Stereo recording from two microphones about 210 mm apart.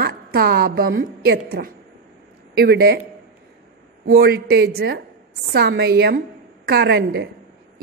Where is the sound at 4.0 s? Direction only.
45° right (ahead or behind).